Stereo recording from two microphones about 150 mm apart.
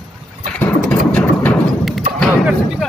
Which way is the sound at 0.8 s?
10° left (ahead or behind).